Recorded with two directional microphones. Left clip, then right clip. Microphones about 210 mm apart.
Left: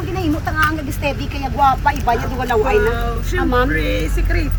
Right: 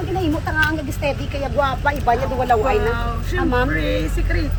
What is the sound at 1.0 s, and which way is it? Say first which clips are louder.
Speech: left 1 dB; 15° right (ahead or behind).